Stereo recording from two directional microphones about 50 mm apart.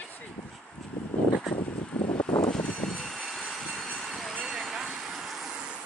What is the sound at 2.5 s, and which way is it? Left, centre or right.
Vehicle, centre.